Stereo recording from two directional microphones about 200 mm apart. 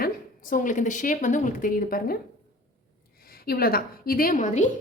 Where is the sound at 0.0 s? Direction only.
40° left (ahead or behind).